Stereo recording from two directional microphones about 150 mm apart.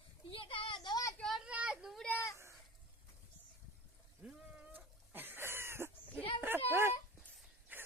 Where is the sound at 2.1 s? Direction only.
20° left (ahead or behind).